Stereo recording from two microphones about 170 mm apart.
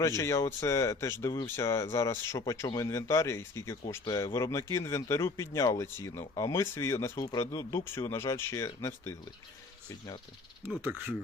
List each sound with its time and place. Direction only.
0.2 s speech: 15° left (ahead or behind)
10.8 s speech: 10° right (ahead or behind)